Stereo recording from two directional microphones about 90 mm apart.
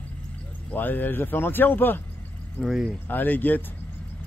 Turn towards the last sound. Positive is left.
turn(degrees=20)  # may be behind; listen again after turning